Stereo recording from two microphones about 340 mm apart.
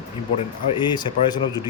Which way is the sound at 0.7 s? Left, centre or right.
Centre.